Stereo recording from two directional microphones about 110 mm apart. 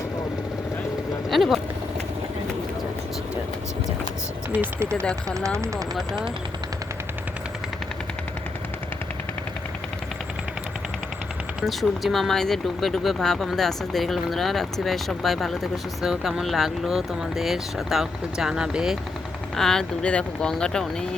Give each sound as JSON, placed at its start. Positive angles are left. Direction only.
{"t": 1.3, "sound": "speech", "side_deg": 0}
{"t": 4.5, "sound": "speech", "side_deg": -15}
{"t": 11.6, "sound": "speech", "side_deg": 0}